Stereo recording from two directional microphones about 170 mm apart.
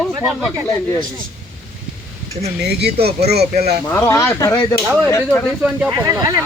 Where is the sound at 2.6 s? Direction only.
70° right (ahead or behind).